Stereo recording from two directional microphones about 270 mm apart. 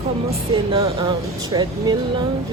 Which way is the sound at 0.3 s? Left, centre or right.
Centre.